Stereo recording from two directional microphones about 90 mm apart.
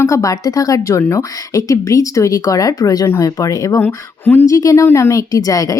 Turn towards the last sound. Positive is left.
turn(degrees=40)  # may be behind; listen again after turning